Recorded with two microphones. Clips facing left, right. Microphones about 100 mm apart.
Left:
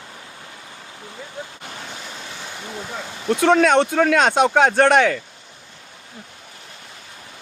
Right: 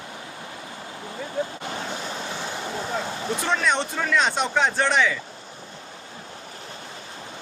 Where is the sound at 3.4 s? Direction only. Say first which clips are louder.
Left 10 dB; 65° left (ahead or behind).